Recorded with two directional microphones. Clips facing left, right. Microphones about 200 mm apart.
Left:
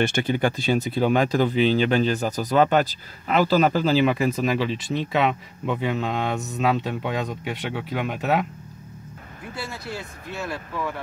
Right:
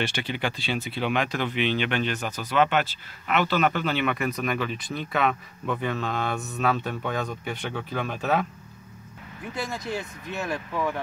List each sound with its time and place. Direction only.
0.0 s speech: 45° left (ahead or behind); by 8.5 s 15° left (ahead or behind)
9.5 s speech: 20° right (ahead or behind)